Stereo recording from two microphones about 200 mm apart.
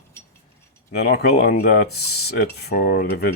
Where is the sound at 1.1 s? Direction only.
50° left (ahead or behind).